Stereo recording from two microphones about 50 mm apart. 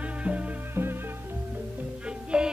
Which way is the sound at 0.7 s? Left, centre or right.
Right.